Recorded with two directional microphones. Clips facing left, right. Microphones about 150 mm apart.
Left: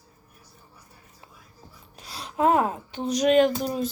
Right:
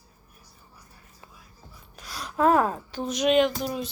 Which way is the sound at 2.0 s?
30° left (ahead or behind).